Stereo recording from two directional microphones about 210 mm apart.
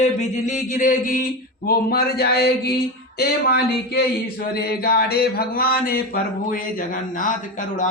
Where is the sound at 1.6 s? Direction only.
50° left (ahead or behind).